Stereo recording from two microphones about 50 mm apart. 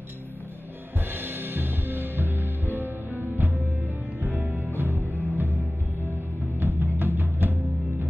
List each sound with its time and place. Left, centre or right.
1.1 s music: right
4.7 s music: right
6.6 s music: right